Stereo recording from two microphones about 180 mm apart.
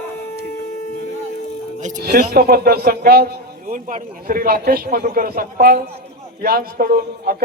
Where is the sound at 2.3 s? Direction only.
60° right (ahead or behind).